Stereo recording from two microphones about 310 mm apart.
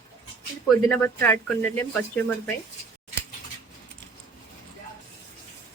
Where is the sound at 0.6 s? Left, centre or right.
Centre.